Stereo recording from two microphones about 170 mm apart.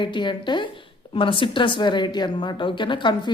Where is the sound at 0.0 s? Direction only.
25° left (ahead or behind).